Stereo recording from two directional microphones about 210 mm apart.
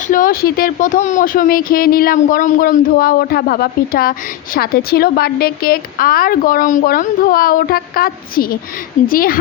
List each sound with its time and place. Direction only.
0.1 s speech: 40° left (ahead or behind)